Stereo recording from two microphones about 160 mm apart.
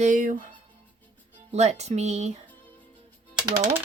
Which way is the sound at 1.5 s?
45° right (ahead or behind).